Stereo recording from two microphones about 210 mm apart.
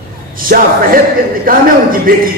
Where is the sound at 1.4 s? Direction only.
40° right (ahead or behind).